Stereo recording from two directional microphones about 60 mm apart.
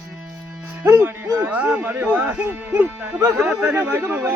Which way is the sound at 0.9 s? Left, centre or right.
Right.